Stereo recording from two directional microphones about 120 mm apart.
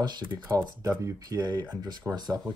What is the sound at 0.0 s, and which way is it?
Speech, 35° right (ahead or behind).